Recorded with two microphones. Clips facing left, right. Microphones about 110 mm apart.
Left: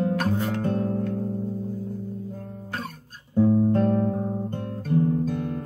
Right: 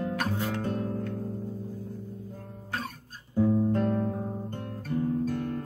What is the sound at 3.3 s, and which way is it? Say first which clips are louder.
Music: left 5 dB; 20° left (ahead or behind).